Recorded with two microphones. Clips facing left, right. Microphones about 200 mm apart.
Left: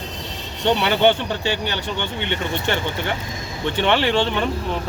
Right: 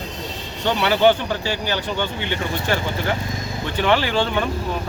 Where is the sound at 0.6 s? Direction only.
25° left (ahead or behind).